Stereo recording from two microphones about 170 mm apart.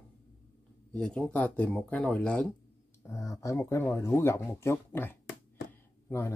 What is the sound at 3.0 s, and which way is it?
Speech, 20° left (ahead or behind).